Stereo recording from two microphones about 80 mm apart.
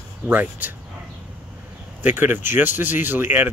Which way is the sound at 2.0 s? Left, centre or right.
Right.